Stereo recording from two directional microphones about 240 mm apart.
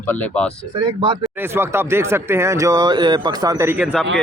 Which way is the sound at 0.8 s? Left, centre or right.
Centre.